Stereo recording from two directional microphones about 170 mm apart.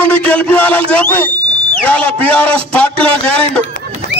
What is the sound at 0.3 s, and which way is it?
A man's voice, 5° left (ahead or behind).